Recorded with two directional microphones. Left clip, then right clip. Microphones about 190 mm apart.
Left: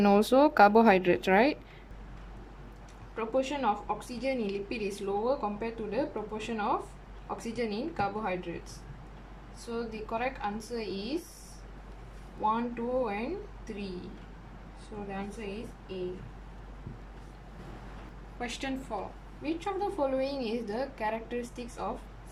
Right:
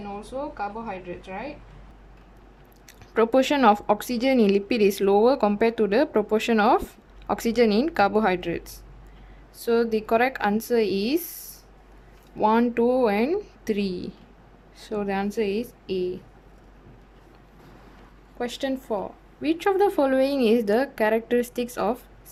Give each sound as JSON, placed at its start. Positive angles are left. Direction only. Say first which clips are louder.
{"t": 0.0, "sound": "speech", "louder": "left 10 dB", "side_deg": 60}
{"t": 3.2, "sound": "a woman's voice", "louder": "right 11 dB", "side_deg": -55}
{"t": 9.6, "sound": "a woman's voice", "louder": "right 15 dB", "side_deg": -50}
{"t": 12.4, "sound": "a woman's voice", "louder": "right 10 dB", "side_deg": -55}
{"t": 18.3, "sound": "a woman's voice", "louder": "right 8 dB", "side_deg": -25}
{"t": 19.4, "sound": "a woman's voice", "louder": "right 12 dB", "side_deg": -50}